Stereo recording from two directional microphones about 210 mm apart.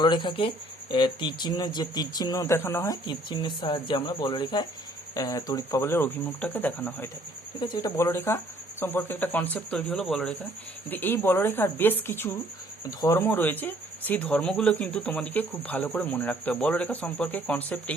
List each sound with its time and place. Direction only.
0.0 s speech: 20° left (ahead or behind)
7.6 s speech: 20° left (ahead or behind)